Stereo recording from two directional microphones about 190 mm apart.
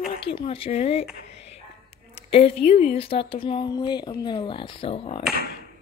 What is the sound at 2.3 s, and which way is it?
Speech, 35° left (ahead or behind).